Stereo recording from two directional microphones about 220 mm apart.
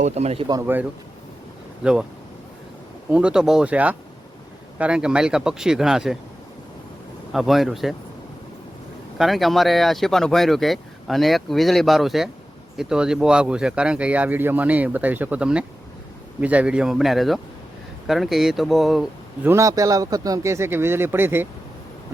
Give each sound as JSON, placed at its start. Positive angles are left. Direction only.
{"t": 0.0, "sound": "speech", "side_deg": -30}
{"t": 1.8, "sound": "speech", "side_deg": -5}
{"t": 3.1, "sound": "speech", "side_deg": -5}
{"t": 7.3, "sound": "speech", "side_deg": 0}
{"t": 9.1, "sound": "speech", "side_deg": 0}